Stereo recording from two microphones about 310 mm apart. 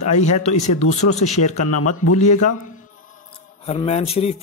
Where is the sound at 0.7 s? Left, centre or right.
Left.